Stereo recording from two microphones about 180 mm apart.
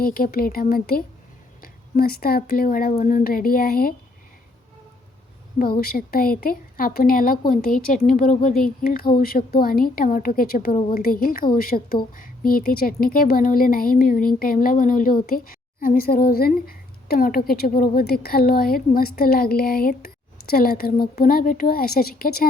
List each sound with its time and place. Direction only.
0.0 s a woman's voice: 55° left (ahead or behind)
5.5 s a woman's voice: 55° left (ahead or behind)